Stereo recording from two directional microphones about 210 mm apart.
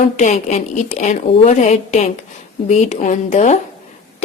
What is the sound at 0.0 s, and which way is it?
A woman's voice, 35° left (ahead or behind).